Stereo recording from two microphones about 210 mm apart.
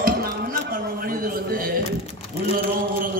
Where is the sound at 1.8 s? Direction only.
30° left (ahead or behind).